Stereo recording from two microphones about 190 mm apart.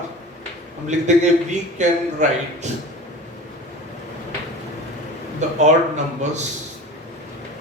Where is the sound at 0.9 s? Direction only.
40° right (ahead or behind).